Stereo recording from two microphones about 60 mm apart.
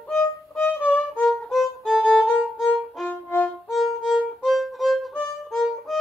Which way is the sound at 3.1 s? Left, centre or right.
Left.